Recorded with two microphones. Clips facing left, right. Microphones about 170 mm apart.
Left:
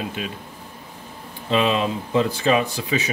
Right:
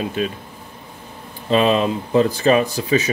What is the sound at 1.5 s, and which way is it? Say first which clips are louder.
Speech: right 4 dB; 40° right (ahead or behind).